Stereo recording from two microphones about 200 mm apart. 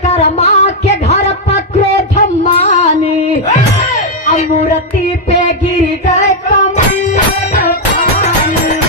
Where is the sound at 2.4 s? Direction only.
35° left (ahead or behind).